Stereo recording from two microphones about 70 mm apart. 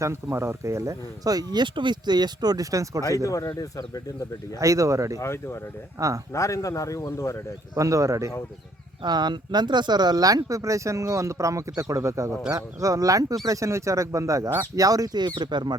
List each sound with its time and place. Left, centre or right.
0.0 s speech: right
3.2 s speech: left
4.6 s speech: right
5.2 s speech: left
7.8 s speech: right
9.0 s speech: right